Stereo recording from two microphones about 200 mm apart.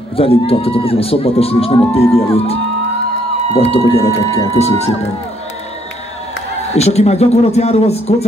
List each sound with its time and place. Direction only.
0.1 s speech: 30° left (ahead or behind)
6.7 s speech: 30° left (ahead or behind)